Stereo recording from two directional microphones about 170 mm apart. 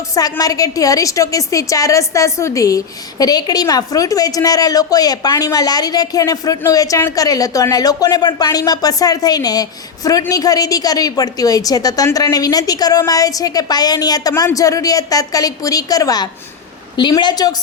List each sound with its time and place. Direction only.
0.1 s a woman's voice: 20° left (ahead or behind)